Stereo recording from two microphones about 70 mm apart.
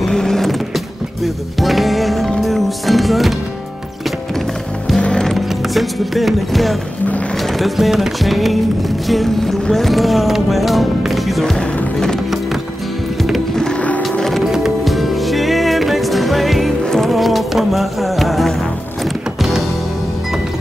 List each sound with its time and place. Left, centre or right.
0.0 s music: centre
4.9 s music: centre
5.2 s music: centre
13.2 s music: centre
14.1 s music: centre